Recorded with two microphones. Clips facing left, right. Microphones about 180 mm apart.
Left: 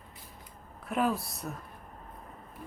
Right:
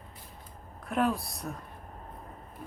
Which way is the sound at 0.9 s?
Centre (ahead or behind).